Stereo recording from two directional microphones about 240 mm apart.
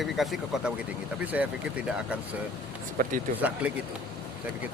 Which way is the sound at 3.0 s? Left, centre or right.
Right.